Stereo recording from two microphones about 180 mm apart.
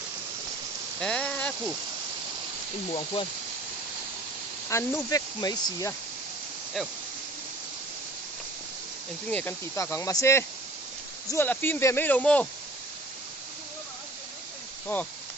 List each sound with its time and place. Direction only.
0.9 s a sound: 5° left (ahead or behind)
4.7 s speech: 15° left (ahead or behind)
6.8 s speech: centre (ahead or behind)
9.3 s speech: 10° left (ahead or behind)